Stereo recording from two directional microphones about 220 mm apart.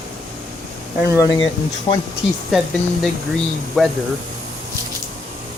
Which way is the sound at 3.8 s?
Centre (ahead or behind).